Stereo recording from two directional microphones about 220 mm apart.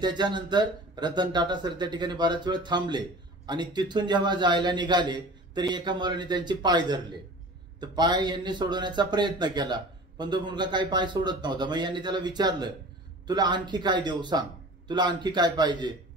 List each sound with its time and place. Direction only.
0.0 s a man's voice: 20° right (ahead or behind)